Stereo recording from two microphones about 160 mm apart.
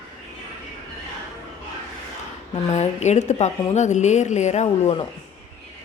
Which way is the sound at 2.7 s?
45° left (ahead or behind).